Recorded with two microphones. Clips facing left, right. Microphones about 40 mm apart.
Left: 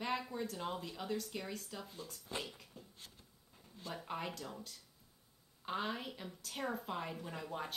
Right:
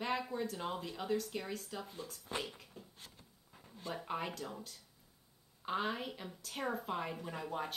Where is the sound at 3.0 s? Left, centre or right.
Right.